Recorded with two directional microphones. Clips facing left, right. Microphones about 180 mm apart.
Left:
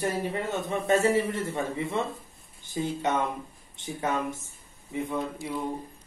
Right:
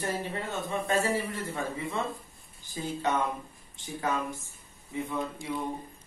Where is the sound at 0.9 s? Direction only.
20° left (ahead or behind).